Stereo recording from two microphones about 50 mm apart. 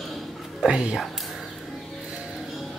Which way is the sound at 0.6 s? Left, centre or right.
Centre.